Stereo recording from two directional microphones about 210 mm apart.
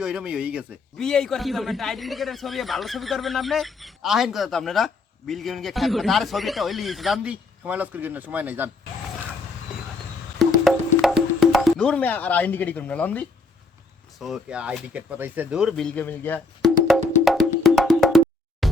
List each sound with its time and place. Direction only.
0.0 s a man's voice: 5° right (ahead or behind)
10.3 s music: centre (ahead or behind)
14.2 s speech: centre (ahead or behind)
18.6 s music: centre (ahead or behind)